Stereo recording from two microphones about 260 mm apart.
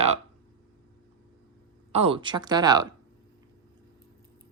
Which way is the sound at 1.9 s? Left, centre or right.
Right.